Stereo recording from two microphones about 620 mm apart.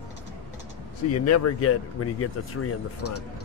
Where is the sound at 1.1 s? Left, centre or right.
Left.